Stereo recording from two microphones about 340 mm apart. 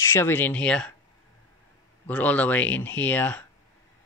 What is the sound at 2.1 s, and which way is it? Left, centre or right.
Speech, centre.